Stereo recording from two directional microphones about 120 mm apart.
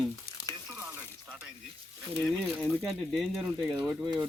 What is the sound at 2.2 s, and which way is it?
Speech, 5° left (ahead or behind).